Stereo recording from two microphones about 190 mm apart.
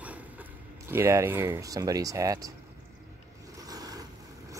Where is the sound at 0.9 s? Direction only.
15° right (ahead or behind).